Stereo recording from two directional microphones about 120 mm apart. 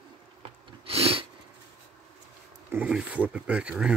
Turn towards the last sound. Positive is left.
turn(degrees=-5)  # may be behind; listen again after turning